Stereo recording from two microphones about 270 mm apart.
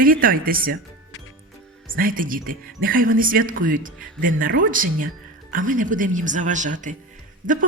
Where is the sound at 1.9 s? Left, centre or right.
Right.